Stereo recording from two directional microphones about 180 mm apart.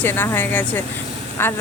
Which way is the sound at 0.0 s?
10° left (ahead or behind).